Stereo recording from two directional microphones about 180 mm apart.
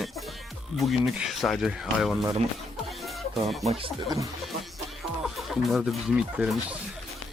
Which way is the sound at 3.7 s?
30° right (ahead or behind).